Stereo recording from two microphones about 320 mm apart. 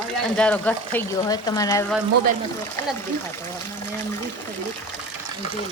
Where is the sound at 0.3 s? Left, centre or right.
Centre.